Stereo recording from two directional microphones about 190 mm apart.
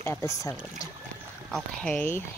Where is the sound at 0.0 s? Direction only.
15° left (ahead or behind).